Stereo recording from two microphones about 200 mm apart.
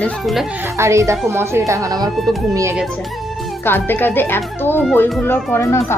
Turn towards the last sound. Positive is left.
turn(degrees=10)  # may be behind; listen again after turning